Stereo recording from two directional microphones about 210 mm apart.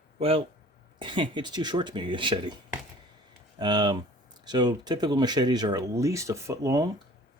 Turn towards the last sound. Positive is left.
turn(degrees=-15)  # may be behind; listen again after turning